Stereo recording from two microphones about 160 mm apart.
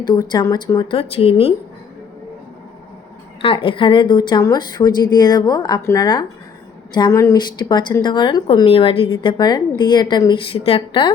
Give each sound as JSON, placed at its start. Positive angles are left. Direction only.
{"t": 0.0, "sound": "a woman's voice", "side_deg": 25}
{"t": 3.4, "sound": "a woman's voice", "side_deg": 35}